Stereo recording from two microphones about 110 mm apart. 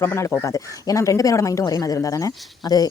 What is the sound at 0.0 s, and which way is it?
Speech, 20° left (ahead or behind).